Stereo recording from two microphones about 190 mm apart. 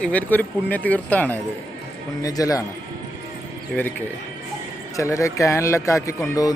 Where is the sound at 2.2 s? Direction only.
20° left (ahead or behind).